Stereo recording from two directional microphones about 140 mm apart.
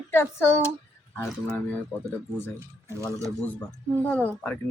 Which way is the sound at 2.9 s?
20° right (ahead or behind).